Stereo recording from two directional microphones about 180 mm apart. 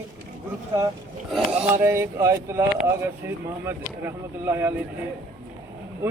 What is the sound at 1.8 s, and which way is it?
Speech, 15° right (ahead or behind).